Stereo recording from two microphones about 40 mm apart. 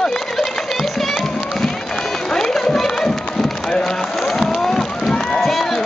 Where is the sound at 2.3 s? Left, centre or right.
Centre.